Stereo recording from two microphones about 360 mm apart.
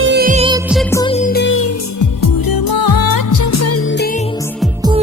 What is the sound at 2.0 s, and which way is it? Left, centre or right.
Music, left.